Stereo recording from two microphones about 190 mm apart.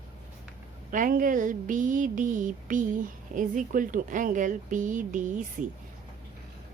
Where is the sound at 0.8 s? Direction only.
45° right (ahead or behind).